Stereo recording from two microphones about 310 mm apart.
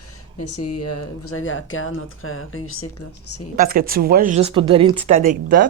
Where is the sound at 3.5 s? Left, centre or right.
Right.